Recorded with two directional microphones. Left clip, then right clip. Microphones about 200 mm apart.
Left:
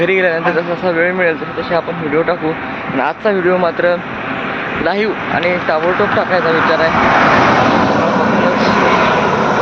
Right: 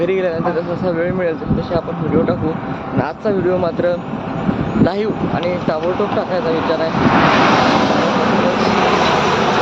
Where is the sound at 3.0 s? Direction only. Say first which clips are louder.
Left 4 dB; 5° right (ahead or behind).